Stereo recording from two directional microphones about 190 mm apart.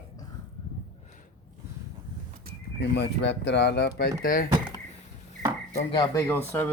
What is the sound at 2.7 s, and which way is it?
Speech, 65° left (ahead or behind).